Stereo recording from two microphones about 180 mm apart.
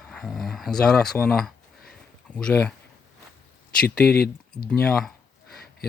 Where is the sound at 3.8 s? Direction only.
60° left (ahead or behind).